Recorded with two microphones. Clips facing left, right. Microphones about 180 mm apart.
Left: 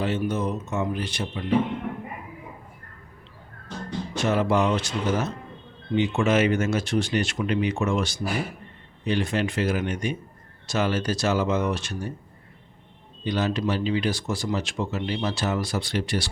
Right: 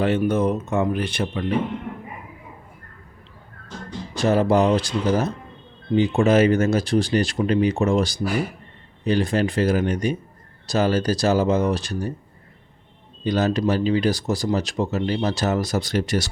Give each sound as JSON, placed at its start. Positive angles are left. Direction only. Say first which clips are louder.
{"t": 0.0, "sound": "speech", "louder": "right 6 dB", "side_deg": -55}
{"t": 4.1, "sound": "speech", "louder": "right 5 dB", "side_deg": -35}
{"t": 13.2, "sound": "speech", "louder": "right 5 dB", "side_deg": -40}